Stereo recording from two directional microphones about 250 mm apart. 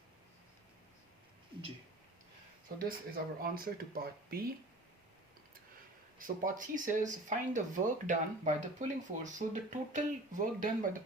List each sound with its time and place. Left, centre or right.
2.7 s speech: right
6.1 s speech: right